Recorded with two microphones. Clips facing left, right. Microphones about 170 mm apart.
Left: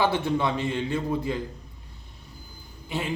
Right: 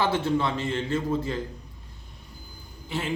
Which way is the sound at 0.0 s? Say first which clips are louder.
Even; 15° left (ahead or behind).